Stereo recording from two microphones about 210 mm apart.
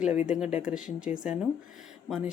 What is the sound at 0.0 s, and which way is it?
Speech, 5° right (ahead or behind).